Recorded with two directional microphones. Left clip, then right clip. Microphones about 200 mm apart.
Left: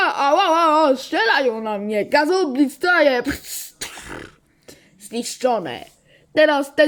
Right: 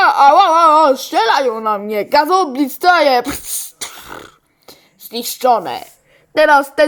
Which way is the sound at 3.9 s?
10° left (ahead or behind).